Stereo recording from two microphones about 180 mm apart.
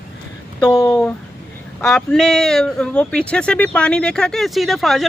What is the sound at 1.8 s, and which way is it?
Speech, 5° left (ahead or behind).